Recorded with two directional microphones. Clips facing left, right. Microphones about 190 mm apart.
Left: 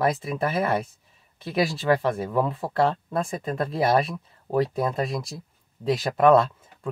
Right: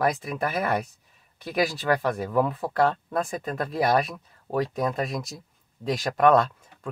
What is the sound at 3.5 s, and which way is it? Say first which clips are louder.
Speech: left 2 dB; 30° left (ahead or behind).